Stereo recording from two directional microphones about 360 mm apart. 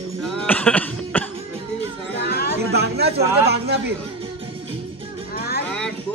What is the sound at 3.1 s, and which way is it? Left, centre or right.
Speech, centre.